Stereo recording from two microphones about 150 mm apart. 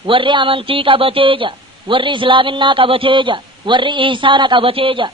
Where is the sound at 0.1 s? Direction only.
35° right (ahead or behind).